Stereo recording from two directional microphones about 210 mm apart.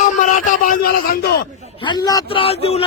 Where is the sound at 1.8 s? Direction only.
20° left (ahead or behind).